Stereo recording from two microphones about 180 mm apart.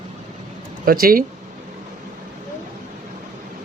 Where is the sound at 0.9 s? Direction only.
55° right (ahead or behind).